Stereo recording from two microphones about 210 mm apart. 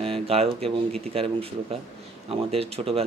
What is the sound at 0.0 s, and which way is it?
Speech, 25° right (ahead or behind).